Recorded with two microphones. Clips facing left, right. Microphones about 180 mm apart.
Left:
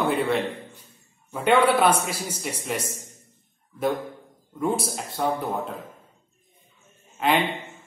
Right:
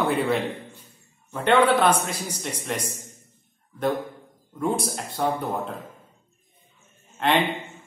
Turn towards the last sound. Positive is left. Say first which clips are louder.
# even
turn(degrees=0)  # may be behind; listen again after turning